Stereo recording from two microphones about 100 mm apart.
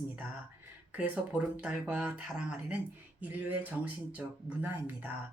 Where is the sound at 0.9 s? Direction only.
15° right (ahead or behind).